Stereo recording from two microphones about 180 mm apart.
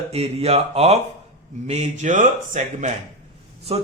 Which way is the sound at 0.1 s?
35° right (ahead or behind).